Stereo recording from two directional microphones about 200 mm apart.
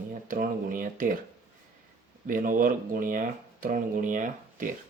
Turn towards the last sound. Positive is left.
turn(degrees=-40)  # may be behind; listen again after turning